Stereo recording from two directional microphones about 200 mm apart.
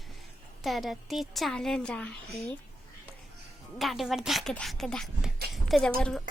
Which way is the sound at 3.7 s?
Centre (ahead or behind).